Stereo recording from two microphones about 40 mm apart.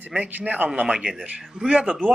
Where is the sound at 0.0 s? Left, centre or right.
Right.